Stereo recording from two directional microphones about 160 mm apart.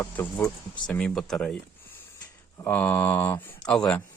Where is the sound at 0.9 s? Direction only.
5° left (ahead or behind).